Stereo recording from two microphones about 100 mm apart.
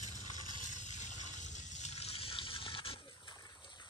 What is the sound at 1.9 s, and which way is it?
Toothbrush, 90° left.